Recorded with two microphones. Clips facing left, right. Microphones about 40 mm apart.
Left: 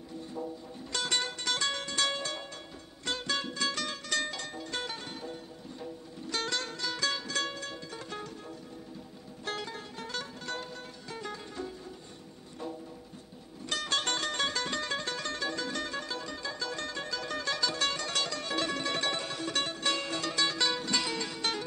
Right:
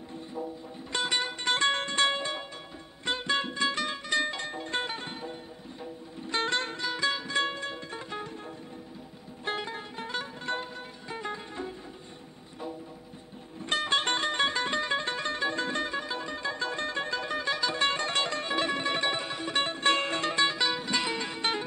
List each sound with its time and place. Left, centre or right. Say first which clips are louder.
0.4 s music: right 3 dB; centre
1.5 s music: right 7 dB; right
9.4 s music: right 4 dB; right
13.7 s music: right 4 dB; right